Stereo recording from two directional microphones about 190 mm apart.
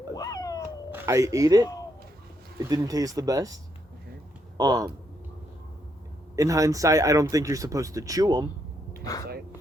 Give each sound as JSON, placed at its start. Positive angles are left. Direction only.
{"t": 0.1, "sound": "cat", "side_deg": 20}
{"t": 0.9, "sound": "speech", "side_deg": -10}
{"t": 6.3, "sound": "speech", "side_deg": -15}